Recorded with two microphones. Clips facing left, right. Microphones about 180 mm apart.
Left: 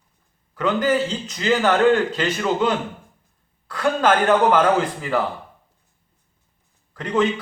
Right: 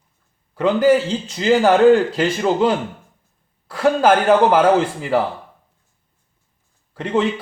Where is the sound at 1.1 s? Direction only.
30° right (ahead or behind).